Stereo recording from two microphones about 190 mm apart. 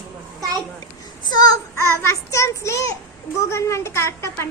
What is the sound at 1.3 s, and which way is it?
Child singing, 20° left (ahead or behind).